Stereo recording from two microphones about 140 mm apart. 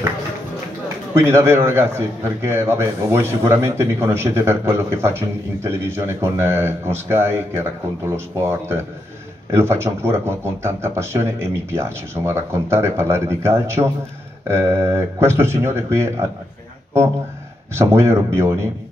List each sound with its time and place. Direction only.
1.1 s a man's voice: 20° right (ahead or behind)
17.7 s speech: 20° right (ahead or behind)